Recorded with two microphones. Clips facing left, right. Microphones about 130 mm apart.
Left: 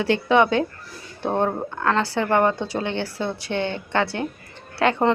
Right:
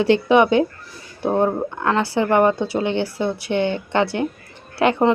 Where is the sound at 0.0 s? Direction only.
20° right (ahead or behind).